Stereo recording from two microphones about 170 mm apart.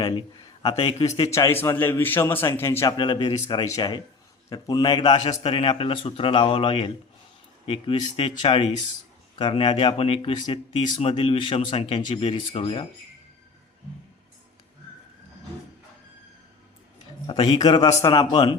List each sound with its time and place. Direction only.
0.8 s speech: 35° left (ahead or behind)
1.2 s a man's voice: 15° left (ahead or behind)
17.2 s a man's voice: 30° left (ahead or behind)